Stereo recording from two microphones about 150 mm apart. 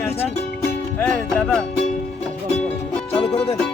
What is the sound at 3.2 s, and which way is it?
Music, 40° left (ahead or behind).